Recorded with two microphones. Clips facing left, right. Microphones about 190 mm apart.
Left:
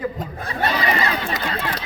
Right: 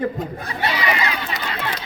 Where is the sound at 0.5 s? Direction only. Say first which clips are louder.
Left 1 dB; 40° left (ahead or behind).